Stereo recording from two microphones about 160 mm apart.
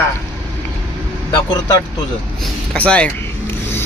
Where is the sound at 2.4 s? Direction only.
10° left (ahead or behind).